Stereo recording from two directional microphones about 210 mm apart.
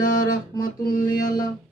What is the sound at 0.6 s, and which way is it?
Mantra, 40° left (ahead or behind).